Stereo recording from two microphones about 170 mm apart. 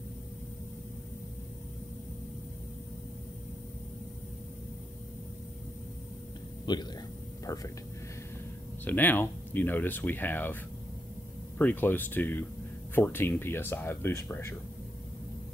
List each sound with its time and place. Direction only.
6.6 s speech: 25° left (ahead or behind)
8.8 s speech: 10° left (ahead or behind)